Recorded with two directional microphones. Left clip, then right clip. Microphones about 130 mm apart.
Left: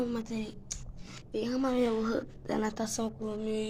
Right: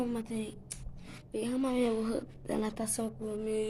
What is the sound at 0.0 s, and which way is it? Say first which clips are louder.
A woman's voice: left 1 dB; 15° right (ahead or behind).